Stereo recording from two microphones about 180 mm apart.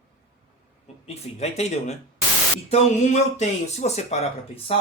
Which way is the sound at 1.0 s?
35° left (ahead or behind).